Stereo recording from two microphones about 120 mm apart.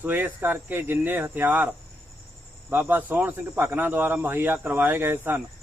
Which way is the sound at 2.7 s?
15° right (ahead or behind).